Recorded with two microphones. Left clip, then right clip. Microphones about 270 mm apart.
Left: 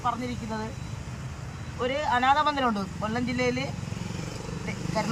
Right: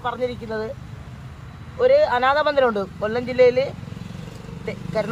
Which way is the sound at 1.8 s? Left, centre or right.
Centre.